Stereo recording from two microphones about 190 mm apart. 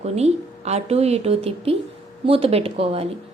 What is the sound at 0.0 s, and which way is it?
A woman's voice, 35° right (ahead or behind).